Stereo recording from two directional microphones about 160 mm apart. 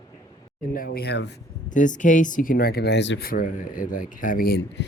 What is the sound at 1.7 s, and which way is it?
Speech, 50° left (ahead or behind).